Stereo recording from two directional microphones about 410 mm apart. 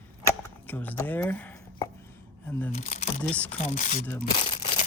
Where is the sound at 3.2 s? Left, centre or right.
Centre.